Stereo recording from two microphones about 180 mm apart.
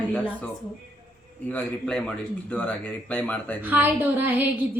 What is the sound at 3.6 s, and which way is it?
A woman's voice, 10° right (ahead or behind).